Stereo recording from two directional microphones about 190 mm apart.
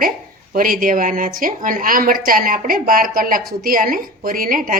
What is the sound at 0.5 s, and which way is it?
A woman's voice, 50° right (ahead or behind).